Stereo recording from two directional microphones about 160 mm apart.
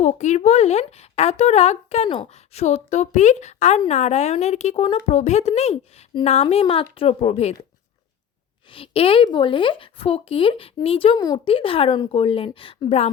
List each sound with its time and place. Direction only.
0.0 s a woman's voice: 45° left (ahead or behind)
8.7 s speech: 35° left (ahead or behind)